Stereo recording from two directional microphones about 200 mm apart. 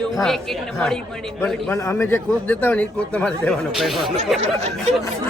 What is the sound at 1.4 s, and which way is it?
A man's voice, 5° left (ahead or behind).